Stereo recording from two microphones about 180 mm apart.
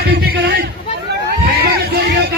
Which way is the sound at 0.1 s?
60° right (ahead or behind).